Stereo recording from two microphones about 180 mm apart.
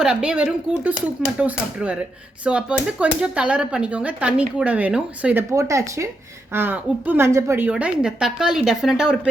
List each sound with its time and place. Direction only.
0.0 s speech: 5° right (ahead or behind)